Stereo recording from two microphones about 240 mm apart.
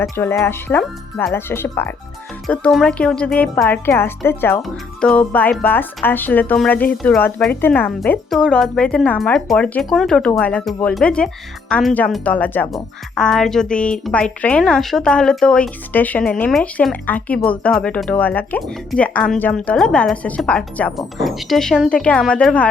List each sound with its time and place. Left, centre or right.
0.0 s speech: centre